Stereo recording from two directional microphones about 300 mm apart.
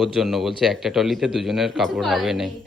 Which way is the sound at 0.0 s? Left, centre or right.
Centre.